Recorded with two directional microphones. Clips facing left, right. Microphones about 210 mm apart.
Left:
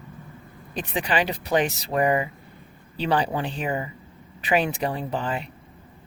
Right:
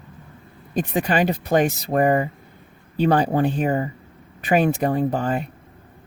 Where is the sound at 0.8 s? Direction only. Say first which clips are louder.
Right 5 dB; 45° right (ahead or behind).